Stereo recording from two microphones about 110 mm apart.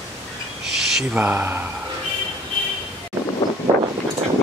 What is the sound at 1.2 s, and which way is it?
Speech, 15° right (ahead or behind).